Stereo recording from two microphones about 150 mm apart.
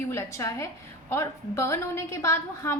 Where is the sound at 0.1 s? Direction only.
20° left (ahead or behind).